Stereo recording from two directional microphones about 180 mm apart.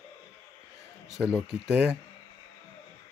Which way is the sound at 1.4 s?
5° right (ahead or behind).